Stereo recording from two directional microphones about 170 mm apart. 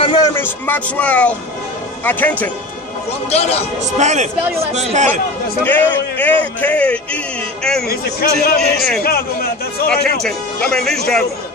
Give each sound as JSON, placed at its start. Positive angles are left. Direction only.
{"t": 0.0, "sound": "a sound", "side_deg": 25}
{"t": 0.4, "sound": "a man's voice", "side_deg": 10}
{"t": 3.3, "sound": "a man's voice", "side_deg": 35}
{"t": 4.0, "sound": "speech", "side_deg": -45}
{"t": 5.6, "sound": "a man's voice", "side_deg": 10}
{"t": 7.9, "sound": "a man's voice", "side_deg": 60}
{"t": 10.7, "sound": "speech", "side_deg": 5}